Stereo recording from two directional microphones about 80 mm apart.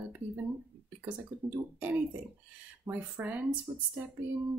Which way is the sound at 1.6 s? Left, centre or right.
Right.